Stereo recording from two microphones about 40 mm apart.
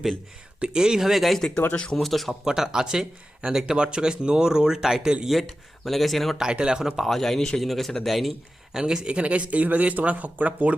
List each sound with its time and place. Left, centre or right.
0.6 s speech: right; by 1.4 s centre
1.7 s speech: left
2.0 s speech: centre
2.4 s speech: centre
5.2 s speech: centre
6.3 s speech: centre
7.0 s a man's voice: centre
8.7 s speech: centre
9.0 s speech: right